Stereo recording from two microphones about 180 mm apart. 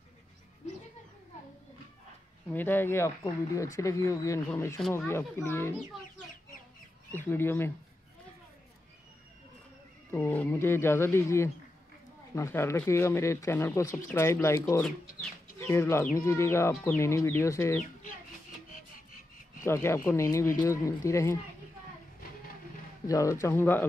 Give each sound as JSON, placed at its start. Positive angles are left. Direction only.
{"t": 2.5, "sound": "speech", "side_deg": 10}
{"t": 7.2, "sound": "speech", "side_deg": 10}
{"t": 10.1, "sound": "speech", "side_deg": 10}
{"t": 19.6, "sound": "speech", "side_deg": 15}
{"t": 23.0, "sound": "speech", "side_deg": 15}